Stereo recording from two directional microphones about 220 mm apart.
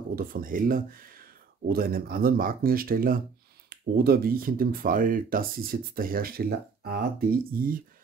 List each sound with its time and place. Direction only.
0.1 s speech: 40° right (ahead or behind)